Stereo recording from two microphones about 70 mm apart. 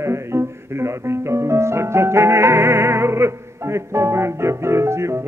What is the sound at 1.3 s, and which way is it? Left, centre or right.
Music, right.